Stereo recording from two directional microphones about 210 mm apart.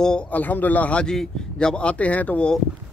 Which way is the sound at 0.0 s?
5° left (ahead or behind).